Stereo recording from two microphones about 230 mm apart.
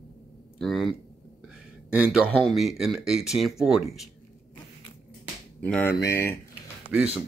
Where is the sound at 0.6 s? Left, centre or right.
Centre.